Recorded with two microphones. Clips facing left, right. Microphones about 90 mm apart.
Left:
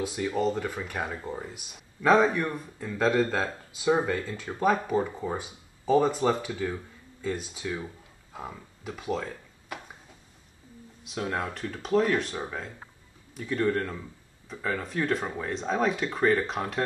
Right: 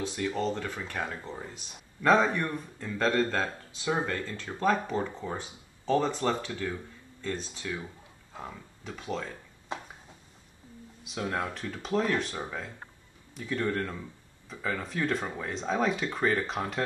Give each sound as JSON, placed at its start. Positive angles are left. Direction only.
{"t": 0.0, "sound": "a man's voice", "side_deg": 10}
{"t": 9.7, "sound": "a sound", "side_deg": -25}
{"t": 11.1, "sound": "speech", "side_deg": 0}